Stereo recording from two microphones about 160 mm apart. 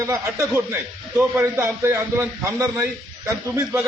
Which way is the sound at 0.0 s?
15° right (ahead or behind).